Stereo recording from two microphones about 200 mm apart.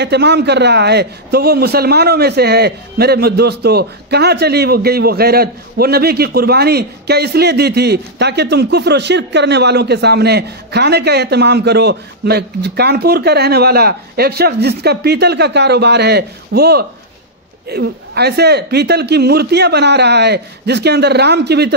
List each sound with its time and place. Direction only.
0.0 s a man's voice: 55° right (ahead or behind)